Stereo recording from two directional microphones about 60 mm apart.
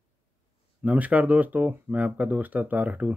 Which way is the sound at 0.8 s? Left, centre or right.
Right.